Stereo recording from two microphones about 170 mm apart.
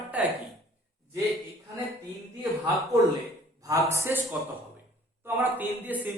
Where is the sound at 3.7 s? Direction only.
15° right (ahead or behind).